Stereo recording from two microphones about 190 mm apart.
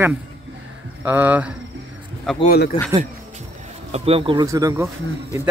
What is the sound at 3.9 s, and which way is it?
Speech, 30° right (ahead or behind).